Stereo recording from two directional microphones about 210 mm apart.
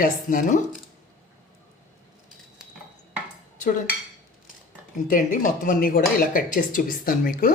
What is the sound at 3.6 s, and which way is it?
Dishes, 35° left (ahead or behind).